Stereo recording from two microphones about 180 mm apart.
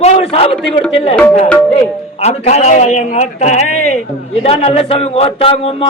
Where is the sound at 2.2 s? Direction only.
35° left (ahead or behind).